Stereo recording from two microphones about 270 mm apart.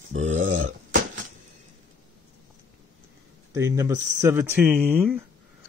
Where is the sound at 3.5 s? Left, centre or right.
Centre.